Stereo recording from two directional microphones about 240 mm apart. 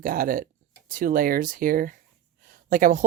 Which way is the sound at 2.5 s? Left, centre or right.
Right.